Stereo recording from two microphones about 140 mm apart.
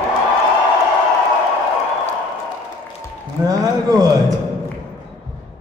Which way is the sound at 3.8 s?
25° right (ahead or behind).